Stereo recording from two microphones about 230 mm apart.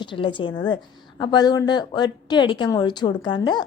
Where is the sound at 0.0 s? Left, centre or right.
Left.